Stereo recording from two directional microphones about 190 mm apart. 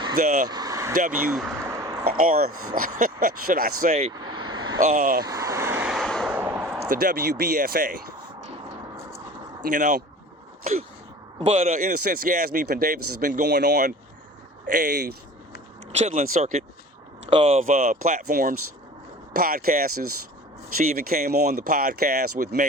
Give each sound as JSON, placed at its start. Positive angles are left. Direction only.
{"t": 0.4, "sound": "a sound", "side_deg": -20}
{"t": 1.1, "sound": "speech", "side_deg": 0}
{"t": 2.0, "sound": "speech", "side_deg": -50}
{"t": 4.1, "sound": "vehicle", "side_deg": -25}
{"t": 4.8, "sound": "speech", "side_deg": -50}
{"t": 5.2, "sound": "vehicle", "side_deg": -15}
{"t": 6.3, "sound": "a sound", "side_deg": -10}
{"t": 6.9, "sound": "speech", "side_deg": -50}
{"t": 9.6, "sound": "speech", "side_deg": -45}
{"t": 10.6, "sound": "a sound", "side_deg": -35}
{"t": 11.3, "sound": "speech", "side_deg": -35}
{"t": 15.9, "sound": "speech", "side_deg": -40}